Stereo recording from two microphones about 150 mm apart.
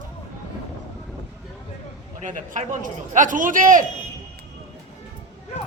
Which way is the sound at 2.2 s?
55° right (ahead or behind).